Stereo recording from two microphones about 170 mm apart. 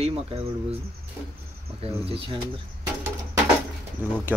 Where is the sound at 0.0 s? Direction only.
35° right (ahead or behind).